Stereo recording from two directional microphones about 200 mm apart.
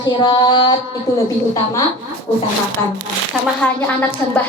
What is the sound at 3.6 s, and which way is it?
Speech, 5° left (ahead or behind).